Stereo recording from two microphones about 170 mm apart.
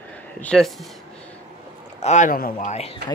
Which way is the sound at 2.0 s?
45° left (ahead or behind).